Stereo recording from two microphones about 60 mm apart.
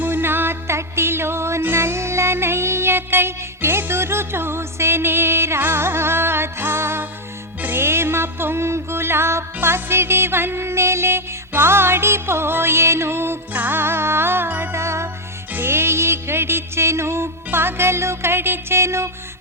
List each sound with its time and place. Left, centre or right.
0.0 s music: right
13.5 s music: right
14.7 s music: right